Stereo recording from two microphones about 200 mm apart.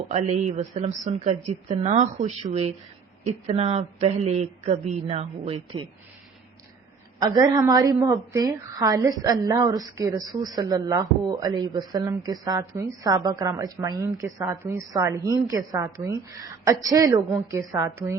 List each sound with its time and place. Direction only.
0.1 s speech: 35° right (ahead or behind)
7.2 s a woman's voice: 20° right (ahead or behind)